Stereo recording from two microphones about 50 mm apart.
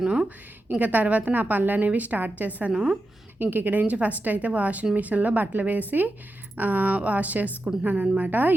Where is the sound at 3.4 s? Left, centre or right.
Right.